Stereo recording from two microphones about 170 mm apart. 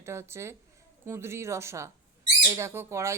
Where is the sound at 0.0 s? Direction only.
15° right (ahead or behind).